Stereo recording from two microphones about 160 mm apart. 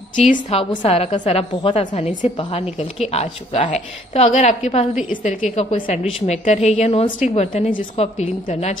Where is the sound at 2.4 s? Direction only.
35° left (ahead or behind).